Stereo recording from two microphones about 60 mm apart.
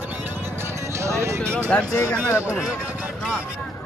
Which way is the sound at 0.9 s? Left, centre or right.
Right.